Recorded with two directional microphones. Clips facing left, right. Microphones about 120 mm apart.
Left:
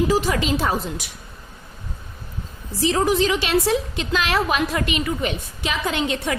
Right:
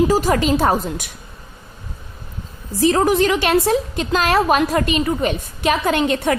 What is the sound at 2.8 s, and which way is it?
A woman's voice, 50° right (ahead or behind).